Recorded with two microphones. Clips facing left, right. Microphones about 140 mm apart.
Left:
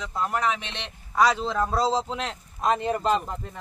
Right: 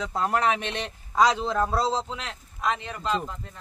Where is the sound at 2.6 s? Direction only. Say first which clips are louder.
Left 5 dB; 45° left (ahead or behind).